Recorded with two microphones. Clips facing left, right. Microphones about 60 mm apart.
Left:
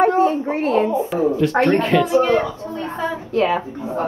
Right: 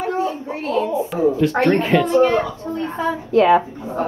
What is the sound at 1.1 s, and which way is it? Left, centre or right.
Speech, centre.